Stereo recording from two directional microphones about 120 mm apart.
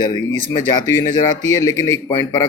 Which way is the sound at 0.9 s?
25° left (ahead or behind).